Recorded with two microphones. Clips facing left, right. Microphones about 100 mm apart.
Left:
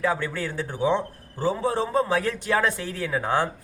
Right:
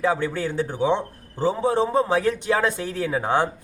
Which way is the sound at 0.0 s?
20° right (ahead or behind).